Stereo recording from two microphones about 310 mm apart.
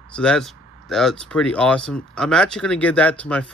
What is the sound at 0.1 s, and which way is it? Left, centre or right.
Speech, centre.